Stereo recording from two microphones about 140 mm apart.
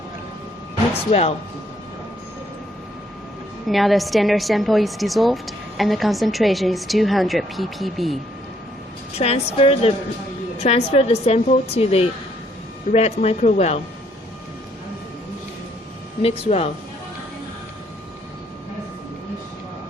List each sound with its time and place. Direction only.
1.1 s speech: 40° left (ahead or behind)
3.7 s a woman's voice: centre (ahead or behind)
9.1 s speech: 50° left (ahead or behind)
16.2 s speech: 45° left (ahead or behind)